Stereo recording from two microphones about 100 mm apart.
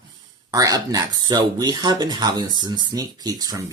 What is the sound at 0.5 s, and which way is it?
Speech, 35° right (ahead or behind).